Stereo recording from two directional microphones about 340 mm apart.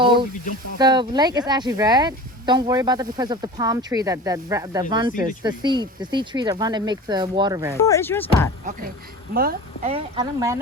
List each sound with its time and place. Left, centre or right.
0.0 s a sound: centre
0.8 s speech: centre
7.8 s speech: centre
9.3 s speech: right